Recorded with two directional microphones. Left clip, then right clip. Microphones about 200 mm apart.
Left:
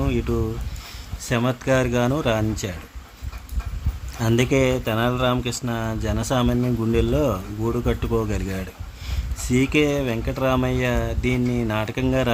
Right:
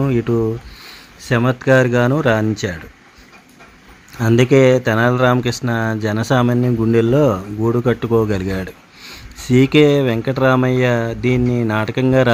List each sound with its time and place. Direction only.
0.0 s speech: 15° right (ahead or behind)
4.4 s speech: 15° right (ahead or behind)